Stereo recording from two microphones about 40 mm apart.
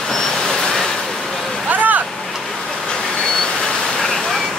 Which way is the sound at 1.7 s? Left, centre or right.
Right.